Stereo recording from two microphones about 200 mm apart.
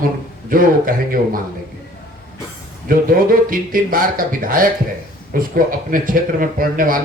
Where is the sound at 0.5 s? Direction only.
45° right (ahead or behind).